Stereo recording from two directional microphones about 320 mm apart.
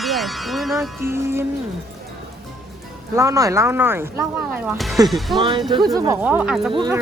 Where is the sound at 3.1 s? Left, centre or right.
Centre.